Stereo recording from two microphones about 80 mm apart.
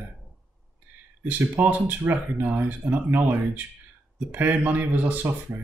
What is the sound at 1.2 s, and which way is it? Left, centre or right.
Speech, right.